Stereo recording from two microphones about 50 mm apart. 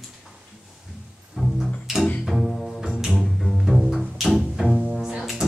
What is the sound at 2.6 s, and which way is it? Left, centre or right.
Double bass, centre.